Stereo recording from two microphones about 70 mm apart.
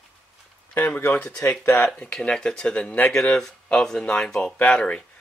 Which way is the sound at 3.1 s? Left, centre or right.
Centre.